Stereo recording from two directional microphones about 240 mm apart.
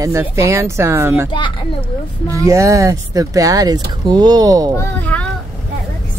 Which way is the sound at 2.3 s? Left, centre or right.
Centre.